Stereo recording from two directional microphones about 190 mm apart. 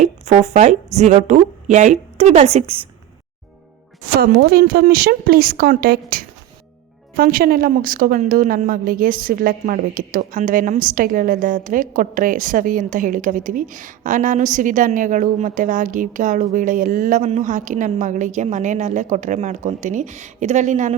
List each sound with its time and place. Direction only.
0.0 s a woman's voice: 35° right (ahead or behind)
4.2 s a woman's voice: 55° right (ahead or behind)